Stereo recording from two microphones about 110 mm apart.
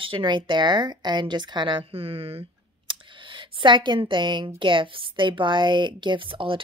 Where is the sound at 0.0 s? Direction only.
50° right (ahead or behind).